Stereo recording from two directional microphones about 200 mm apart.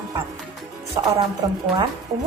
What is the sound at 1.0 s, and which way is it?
Speech, 15° right (ahead or behind).